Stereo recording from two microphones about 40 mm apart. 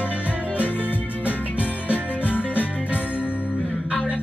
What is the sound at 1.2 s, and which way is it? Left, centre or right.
Music, left.